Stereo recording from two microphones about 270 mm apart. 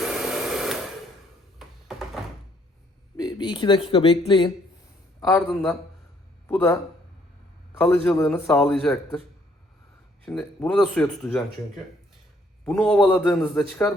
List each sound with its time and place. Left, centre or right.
0.0 s a sound: centre
3.2 s speech: centre
7.8 s a man's voice: centre
10.2 s a man's voice: centre
12.6 s a man's voice: centre